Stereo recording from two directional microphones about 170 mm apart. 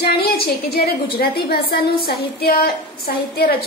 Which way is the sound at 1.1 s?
65° left (ahead or behind).